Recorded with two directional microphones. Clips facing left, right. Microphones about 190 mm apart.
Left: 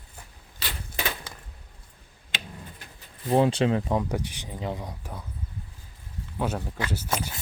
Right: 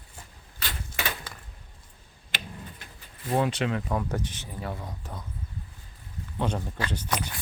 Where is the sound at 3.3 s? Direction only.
30° left (ahead or behind).